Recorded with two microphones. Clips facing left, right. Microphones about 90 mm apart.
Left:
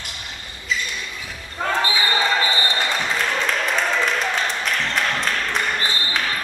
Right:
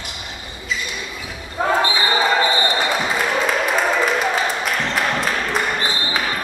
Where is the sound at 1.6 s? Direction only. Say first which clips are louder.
Right 3 dB; 10° right (ahead or behind).